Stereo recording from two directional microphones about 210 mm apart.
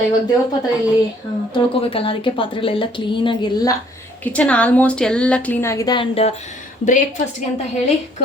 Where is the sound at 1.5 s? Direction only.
25° left (ahead or behind).